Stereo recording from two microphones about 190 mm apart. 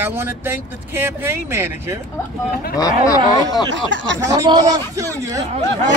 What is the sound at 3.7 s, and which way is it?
Speech, 80° right.